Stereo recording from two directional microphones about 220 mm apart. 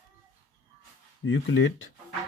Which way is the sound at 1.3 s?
60° left (ahead or behind).